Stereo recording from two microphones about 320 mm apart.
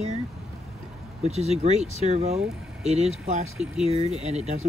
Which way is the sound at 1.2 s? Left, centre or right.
Centre.